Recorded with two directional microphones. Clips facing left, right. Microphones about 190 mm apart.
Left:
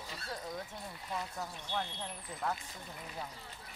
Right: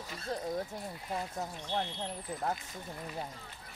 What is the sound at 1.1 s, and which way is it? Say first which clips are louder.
Speech: right 3 dB; 30° right (ahead or behind).